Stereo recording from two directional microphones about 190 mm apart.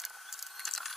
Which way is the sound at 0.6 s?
Centre (ahead or behind).